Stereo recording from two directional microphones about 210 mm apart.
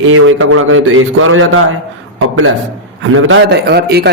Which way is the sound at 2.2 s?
90° right.